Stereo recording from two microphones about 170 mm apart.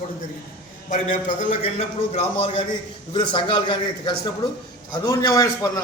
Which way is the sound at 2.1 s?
35° left (ahead or behind).